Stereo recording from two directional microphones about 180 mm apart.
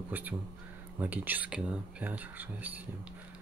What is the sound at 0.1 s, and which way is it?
Speech, 10° right (ahead or behind).